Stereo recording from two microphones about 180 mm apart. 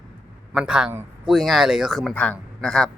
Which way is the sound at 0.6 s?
5° right (ahead or behind).